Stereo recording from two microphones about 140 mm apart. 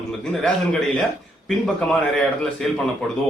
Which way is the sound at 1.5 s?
5° left (ahead or behind).